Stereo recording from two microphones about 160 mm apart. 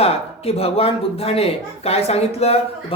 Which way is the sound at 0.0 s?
40° left (ahead or behind).